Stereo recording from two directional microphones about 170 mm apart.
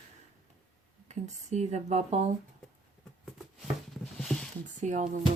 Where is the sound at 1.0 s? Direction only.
40° right (ahead or behind).